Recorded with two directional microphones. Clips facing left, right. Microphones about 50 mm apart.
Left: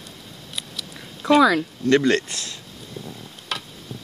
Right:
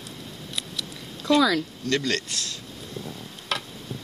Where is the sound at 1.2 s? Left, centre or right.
Left.